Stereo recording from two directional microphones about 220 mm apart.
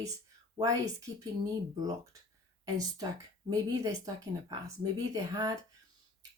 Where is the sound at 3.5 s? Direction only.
15° right (ahead or behind).